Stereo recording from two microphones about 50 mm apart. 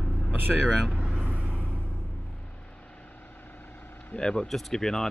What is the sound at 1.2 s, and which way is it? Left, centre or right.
Vehicle, right.